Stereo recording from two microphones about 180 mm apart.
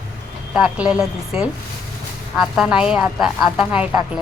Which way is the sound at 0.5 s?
5° right (ahead or behind).